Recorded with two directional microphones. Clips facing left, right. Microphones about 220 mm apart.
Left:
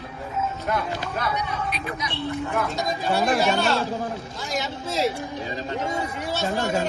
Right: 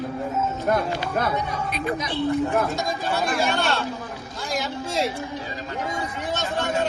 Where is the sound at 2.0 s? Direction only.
35° right (ahead or behind).